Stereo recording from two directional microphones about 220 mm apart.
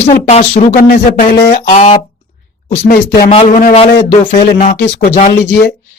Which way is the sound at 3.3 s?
30° left (ahead or behind).